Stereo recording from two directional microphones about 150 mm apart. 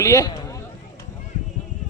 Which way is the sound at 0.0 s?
20° left (ahead or behind).